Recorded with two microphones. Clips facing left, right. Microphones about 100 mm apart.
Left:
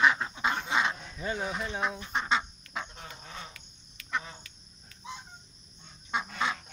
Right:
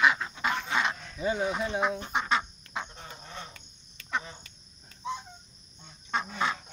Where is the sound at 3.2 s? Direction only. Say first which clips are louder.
Right 2 dB; centre (ahead or behind).